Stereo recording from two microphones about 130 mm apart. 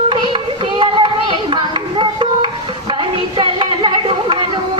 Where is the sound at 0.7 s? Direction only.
40° right (ahead or behind).